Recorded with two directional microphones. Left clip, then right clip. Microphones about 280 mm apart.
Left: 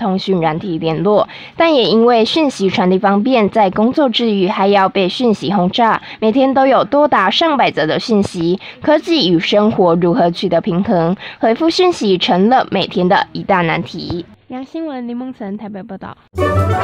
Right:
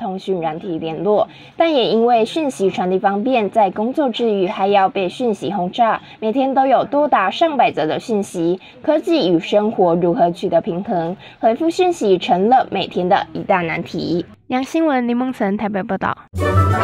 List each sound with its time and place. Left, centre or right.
0.4 s a woman's voice: centre
13.9 s a woman's voice: centre
14.5 s a woman's voice: right
16.3 s music: centre